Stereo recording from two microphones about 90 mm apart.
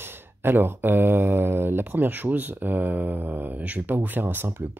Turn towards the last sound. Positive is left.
turn(degrees=-25)  # may be behind; listen again after turning